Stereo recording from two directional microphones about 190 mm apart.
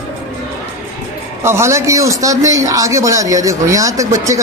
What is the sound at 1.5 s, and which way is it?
Speech, 15° right (ahead or behind).